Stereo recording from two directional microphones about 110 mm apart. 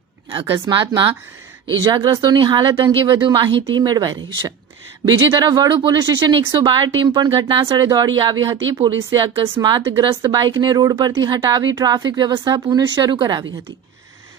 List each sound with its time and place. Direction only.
0.3 s speech: 50° right (ahead or behind)